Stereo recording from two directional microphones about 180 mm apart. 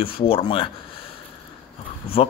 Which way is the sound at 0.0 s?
30° left (ahead or behind).